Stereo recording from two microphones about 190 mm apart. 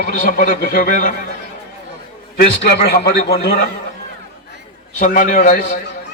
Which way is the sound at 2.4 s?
60° left (ahead or behind).